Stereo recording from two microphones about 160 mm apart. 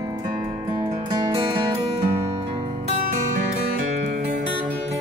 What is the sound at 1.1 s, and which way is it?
Music, 30° right (ahead or behind).